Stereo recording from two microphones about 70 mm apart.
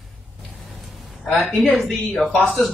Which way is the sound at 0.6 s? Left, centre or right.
Centre.